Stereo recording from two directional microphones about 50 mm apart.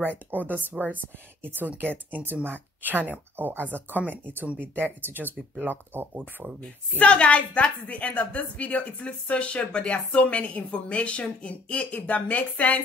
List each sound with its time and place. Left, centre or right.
0.3 s speech: right
7.1 s a woman's voice: left